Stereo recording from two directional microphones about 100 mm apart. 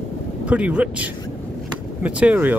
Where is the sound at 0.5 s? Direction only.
10° right (ahead or behind).